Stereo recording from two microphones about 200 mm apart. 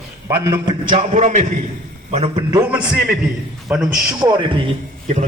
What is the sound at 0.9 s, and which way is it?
Speech, 35° right (ahead or behind).